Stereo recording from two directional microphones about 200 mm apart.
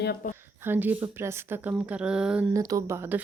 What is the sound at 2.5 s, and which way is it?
Speech, 15° right (ahead or behind).